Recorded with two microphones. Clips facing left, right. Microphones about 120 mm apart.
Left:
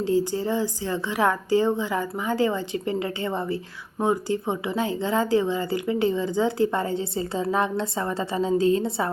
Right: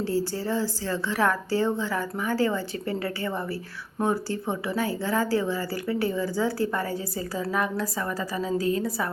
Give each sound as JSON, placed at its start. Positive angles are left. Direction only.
{"t": 0.0, "sound": "a woman's voice", "side_deg": 20}